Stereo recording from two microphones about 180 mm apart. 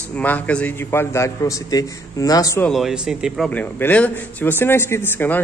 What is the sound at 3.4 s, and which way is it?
A man's voice, 10° left (ahead or behind).